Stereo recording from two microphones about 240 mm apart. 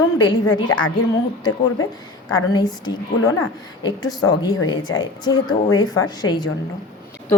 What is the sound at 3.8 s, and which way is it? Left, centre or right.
Speech, centre.